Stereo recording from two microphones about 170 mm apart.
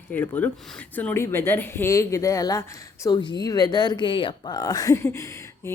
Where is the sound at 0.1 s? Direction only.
10° left (ahead or behind).